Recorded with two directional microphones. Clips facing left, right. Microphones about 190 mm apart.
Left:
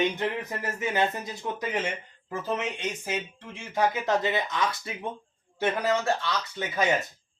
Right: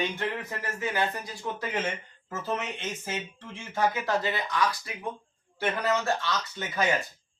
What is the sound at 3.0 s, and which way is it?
Speech, 15° left (ahead or behind).